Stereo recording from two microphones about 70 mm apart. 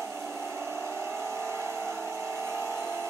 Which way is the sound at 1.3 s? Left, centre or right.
Right.